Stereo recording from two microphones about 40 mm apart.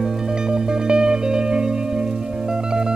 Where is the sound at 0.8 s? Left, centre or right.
Centre.